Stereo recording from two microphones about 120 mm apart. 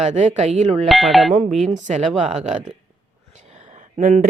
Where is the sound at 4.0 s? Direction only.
90° right.